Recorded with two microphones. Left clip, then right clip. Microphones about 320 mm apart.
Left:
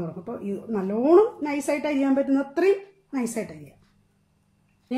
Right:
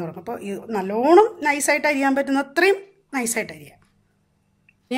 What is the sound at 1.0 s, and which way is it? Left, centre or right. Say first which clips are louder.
Speech: right 4 dB; right.